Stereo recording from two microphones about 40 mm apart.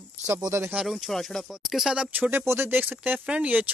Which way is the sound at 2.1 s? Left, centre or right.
Right.